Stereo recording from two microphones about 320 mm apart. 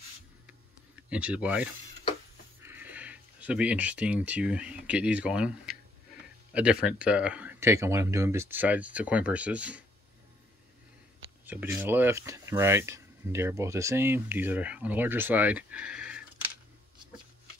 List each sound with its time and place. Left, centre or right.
1.1 s speech: centre
11.4 s speech: centre